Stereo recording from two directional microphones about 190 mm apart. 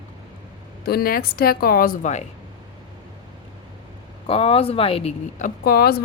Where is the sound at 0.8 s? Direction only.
55° left (ahead or behind).